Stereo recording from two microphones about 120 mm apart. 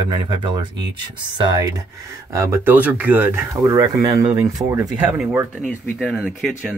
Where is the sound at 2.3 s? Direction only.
25° right (ahead or behind).